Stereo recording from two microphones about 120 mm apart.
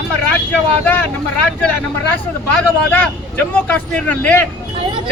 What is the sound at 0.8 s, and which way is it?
Speech, 15° left (ahead or behind).